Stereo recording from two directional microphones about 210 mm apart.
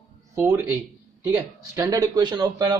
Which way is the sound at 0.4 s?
10° right (ahead or behind).